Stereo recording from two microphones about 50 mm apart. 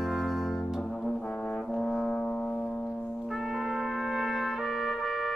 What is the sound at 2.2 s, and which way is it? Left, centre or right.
Music, left.